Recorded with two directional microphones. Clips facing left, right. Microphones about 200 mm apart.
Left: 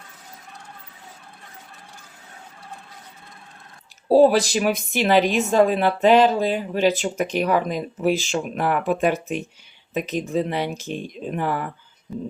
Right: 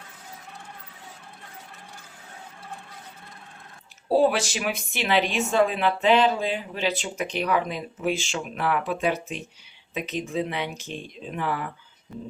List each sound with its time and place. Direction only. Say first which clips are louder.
4.1 s speech: left 6 dB; 35° left (ahead or behind)